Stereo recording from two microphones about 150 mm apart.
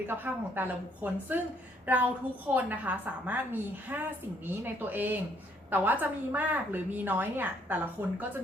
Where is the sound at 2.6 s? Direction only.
10° right (ahead or behind).